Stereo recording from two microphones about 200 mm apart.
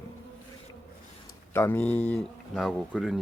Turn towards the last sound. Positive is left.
turn(degrees=0)  # may be behind; listen again after turning